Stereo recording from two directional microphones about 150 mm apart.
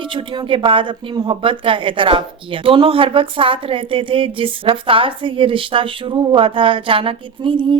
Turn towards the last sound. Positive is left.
turn(degrees=-35)  # may be behind; listen again after turning